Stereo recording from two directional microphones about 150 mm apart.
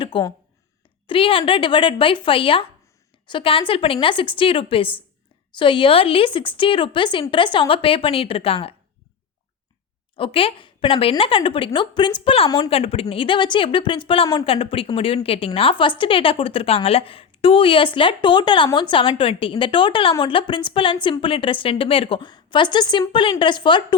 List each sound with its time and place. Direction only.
0.0 s a sound: 35° left (ahead or behind)
1.0 s a woman's voice: 35° left (ahead or behind)
10.2 s a woman's voice: 40° left (ahead or behind)
12.5 s a woman's voice: 25° left (ahead or behind)
12.7 s a woman's voice: 40° left (ahead or behind)